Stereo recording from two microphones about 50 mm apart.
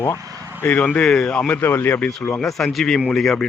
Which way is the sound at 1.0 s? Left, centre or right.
Centre.